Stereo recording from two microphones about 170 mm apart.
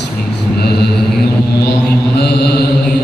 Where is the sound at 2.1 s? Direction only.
75° left (ahead or behind).